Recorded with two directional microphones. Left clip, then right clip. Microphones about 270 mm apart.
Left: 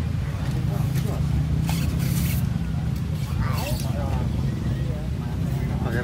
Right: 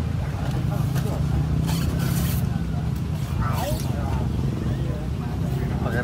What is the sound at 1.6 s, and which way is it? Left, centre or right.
Vehicle, centre.